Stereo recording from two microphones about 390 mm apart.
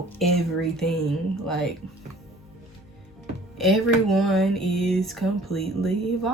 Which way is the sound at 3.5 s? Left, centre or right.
Centre.